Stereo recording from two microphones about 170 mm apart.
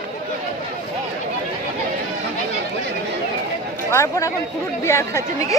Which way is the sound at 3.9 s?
15° left (ahead or behind).